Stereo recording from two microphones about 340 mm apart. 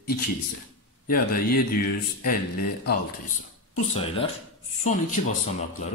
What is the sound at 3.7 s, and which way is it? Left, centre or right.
Speech, centre.